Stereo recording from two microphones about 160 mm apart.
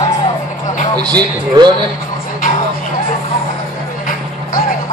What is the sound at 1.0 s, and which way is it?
Speech, 25° right (ahead or behind).